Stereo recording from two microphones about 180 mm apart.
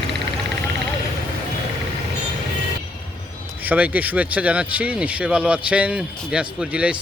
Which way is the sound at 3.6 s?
10° right (ahead or behind).